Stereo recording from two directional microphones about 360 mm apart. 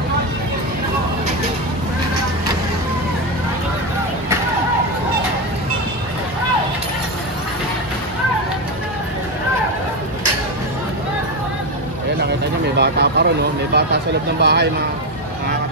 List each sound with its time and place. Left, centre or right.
12.7 s speech: right